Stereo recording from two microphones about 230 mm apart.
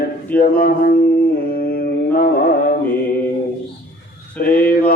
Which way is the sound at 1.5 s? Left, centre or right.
Left.